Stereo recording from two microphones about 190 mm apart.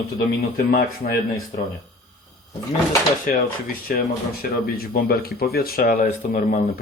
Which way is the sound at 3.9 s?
45° left (ahead or behind).